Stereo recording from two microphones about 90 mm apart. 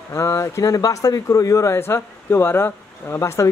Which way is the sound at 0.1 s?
35° left (ahead or behind).